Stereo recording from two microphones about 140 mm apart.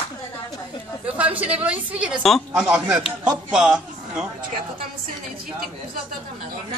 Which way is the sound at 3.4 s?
5° right (ahead or behind).